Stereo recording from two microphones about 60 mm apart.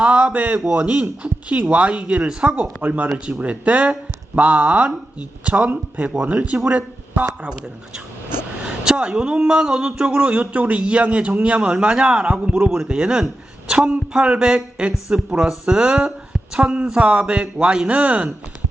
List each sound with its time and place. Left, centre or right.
0.0 s speech: right
8.4 s a man's voice: centre